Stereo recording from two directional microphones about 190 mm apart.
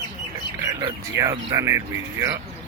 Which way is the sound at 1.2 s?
15° right (ahead or behind).